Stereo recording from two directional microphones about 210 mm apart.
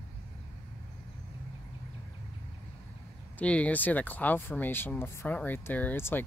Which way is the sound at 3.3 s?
5° left (ahead or behind).